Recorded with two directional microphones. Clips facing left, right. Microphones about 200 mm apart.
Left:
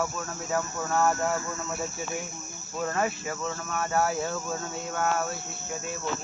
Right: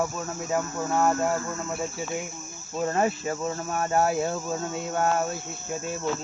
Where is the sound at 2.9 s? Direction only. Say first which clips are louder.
Right 4 dB; 30° right (ahead or behind).